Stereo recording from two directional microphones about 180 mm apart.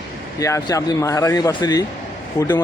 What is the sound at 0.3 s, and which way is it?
A man's voice, 20° left (ahead or behind).